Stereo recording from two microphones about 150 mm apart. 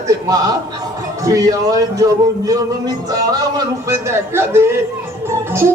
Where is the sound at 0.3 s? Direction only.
25° right (ahead or behind).